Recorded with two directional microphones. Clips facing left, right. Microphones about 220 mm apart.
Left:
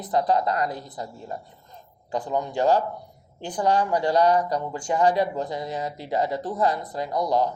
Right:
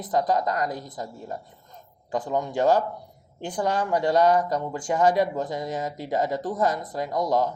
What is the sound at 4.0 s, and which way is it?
A man's voice, 50° right (ahead or behind).